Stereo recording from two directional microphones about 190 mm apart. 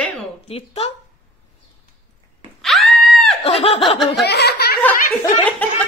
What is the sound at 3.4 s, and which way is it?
Laughter, 30° left (ahead or behind).